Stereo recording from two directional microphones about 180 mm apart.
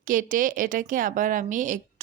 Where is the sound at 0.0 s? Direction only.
50° right (ahead or behind).